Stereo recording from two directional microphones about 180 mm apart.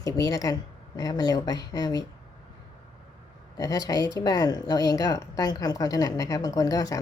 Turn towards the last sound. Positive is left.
turn(degrees=20)  # may be behind; listen again after turning